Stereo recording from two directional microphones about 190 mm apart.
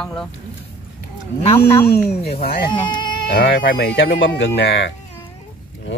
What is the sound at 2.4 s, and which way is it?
Speech, 55° left (ahead or behind).